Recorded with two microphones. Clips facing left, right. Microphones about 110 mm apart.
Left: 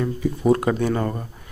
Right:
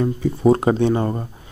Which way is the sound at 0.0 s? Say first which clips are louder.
Right 4 dB; 30° right (ahead or behind).